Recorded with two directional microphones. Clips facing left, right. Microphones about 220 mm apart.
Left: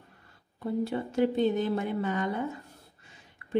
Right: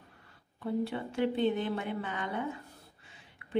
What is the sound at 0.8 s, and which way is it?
A woman's voice, 40° left (ahead or behind).